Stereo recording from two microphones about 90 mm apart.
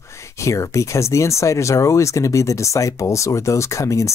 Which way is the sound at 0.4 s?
35° left (ahead or behind).